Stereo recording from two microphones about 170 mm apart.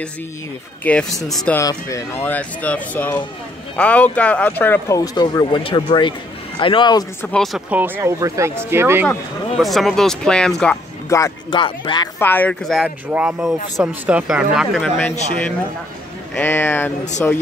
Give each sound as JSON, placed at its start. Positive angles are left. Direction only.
{"t": 0.8, "sound": "speech", "side_deg": 5}
{"t": 1.6, "sound": "a man's voice", "side_deg": 20}
{"t": 7.5, "sound": "speech", "side_deg": -10}
{"t": 9.6, "sound": "speech", "side_deg": 0}
{"t": 11.1, "sound": "speech", "side_deg": 20}
{"t": 11.5, "sound": "a man's voice", "side_deg": 30}
{"t": 12.2, "sound": "speech", "side_deg": 10}
{"t": 15.0, "sound": "speech", "side_deg": 10}